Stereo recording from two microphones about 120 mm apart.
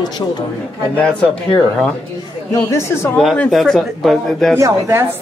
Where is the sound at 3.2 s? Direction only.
5° left (ahead or behind).